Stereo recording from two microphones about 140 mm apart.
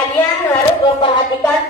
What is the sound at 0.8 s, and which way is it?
Music, 35° left (ahead or behind).